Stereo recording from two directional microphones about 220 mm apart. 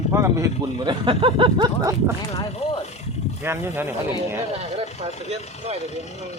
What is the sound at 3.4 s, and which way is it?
Speech, 10° right (ahead or behind).